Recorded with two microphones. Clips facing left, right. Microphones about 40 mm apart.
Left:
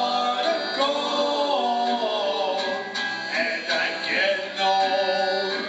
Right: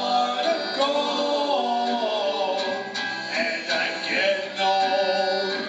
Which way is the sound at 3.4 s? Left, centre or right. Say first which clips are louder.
Even; centre.